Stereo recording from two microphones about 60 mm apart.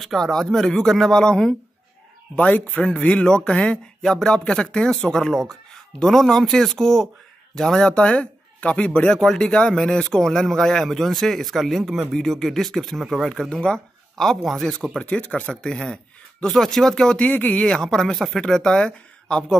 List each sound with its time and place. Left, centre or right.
0.0 s speech: centre
2.3 s speech: left
4.0 s speech: centre
14.2 s speech: centre
15.0 s speech: centre
15.5 s speech: centre
17.2 s speech: left
17.6 s speech: centre